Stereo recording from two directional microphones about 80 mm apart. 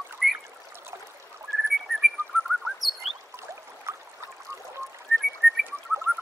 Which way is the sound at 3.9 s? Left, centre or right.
Right.